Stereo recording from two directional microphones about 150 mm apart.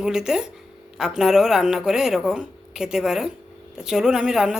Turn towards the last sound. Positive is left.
turn(degrees=-5)  # may be behind; listen again after turning